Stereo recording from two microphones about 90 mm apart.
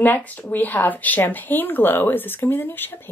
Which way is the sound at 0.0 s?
20° left (ahead or behind).